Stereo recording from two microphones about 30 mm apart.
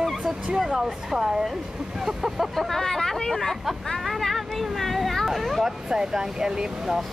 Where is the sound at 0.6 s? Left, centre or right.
Centre.